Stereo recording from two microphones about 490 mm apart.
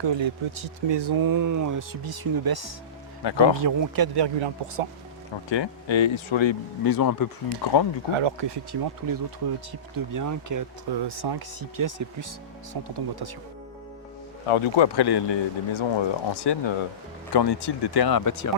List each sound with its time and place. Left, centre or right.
0.0 s speech: right
3.2 s speech: left
3.6 s speech: right
5.5 s speech: left
6.8 s speech: left
8.1 s speech: right
11.0 s speech: right
12.7 s speech: right
14.4 s speech: left